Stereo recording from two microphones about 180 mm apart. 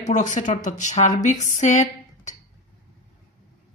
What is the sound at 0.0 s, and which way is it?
Speech, 40° left (ahead or behind).